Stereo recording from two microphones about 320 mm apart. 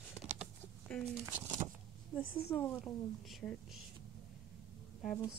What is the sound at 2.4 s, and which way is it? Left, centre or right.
Speech, centre.